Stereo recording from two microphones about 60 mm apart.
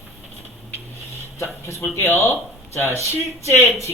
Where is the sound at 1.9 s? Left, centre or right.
Left.